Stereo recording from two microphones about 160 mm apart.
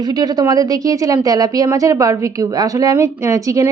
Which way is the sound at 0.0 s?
25° right (ahead or behind).